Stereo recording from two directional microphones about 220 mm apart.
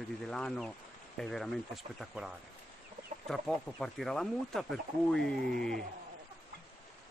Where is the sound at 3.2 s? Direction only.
Centre (ahead or behind).